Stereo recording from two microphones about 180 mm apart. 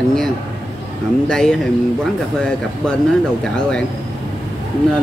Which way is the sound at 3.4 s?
5° left (ahead or behind).